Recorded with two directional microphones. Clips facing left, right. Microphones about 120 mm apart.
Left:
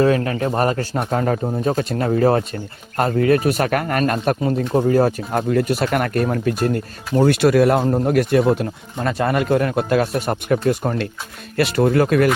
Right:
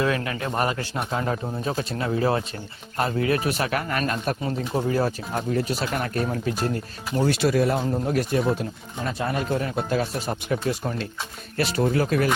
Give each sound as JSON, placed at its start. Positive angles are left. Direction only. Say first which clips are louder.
{"t": 0.0, "sound": "a man's voice", "louder": "left 8 dB", "side_deg": 40}
{"t": 9.0, "sound": "speech", "louder": "left 8 dB", "side_deg": 75}